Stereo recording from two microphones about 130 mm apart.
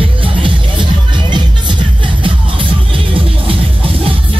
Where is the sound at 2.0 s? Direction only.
40° right (ahead or behind).